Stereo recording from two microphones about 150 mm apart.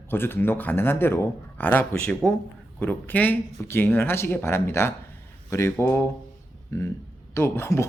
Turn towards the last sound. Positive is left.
turn(degrees=15)  # may be behind; listen again after turning